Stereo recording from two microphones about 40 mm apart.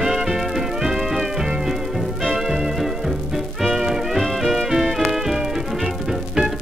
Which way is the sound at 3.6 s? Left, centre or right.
Centre.